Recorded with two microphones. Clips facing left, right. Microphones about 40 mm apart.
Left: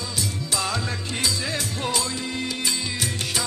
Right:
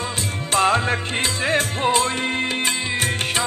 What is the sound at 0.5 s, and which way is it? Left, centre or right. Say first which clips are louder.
Music: right 10 dB; right.